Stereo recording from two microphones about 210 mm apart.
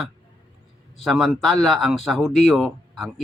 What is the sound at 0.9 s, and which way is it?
Speech, centre (ahead or behind).